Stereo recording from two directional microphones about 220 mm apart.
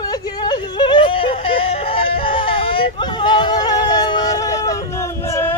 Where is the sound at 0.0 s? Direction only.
15° left (ahead or behind).